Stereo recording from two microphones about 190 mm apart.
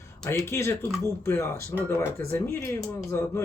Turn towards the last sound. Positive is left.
turn(degrees=15)  # may be behind; listen again after turning